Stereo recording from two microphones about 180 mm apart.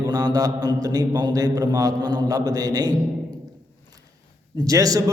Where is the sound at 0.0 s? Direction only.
20° right (ahead or behind).